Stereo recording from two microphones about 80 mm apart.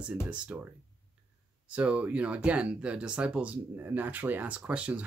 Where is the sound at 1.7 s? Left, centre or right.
Centre.